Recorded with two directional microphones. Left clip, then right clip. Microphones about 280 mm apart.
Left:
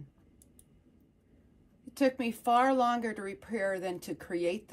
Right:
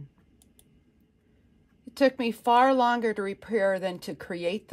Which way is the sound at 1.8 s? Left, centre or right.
Right.